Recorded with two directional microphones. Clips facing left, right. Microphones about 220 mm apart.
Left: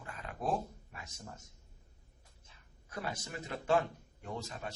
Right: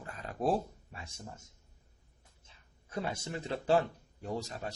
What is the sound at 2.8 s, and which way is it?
A man's voice, 25° right (ahead or behind).